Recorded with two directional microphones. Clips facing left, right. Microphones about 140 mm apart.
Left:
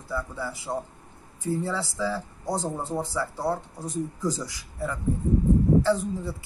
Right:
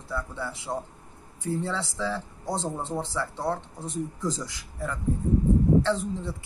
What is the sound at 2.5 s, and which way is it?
Speech, 25° right (ahead or behind).